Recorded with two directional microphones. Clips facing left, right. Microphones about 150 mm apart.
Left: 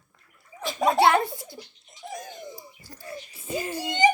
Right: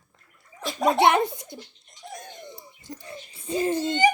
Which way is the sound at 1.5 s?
5° left (ahead or behind).